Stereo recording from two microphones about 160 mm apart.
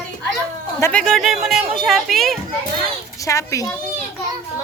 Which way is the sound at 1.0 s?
Centre (ahead or behind).